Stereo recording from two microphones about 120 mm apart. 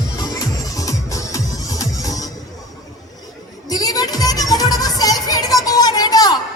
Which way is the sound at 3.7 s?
30° left (ahead or behind).